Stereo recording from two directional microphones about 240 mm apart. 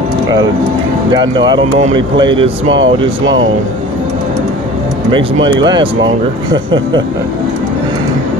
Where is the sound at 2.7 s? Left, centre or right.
Right.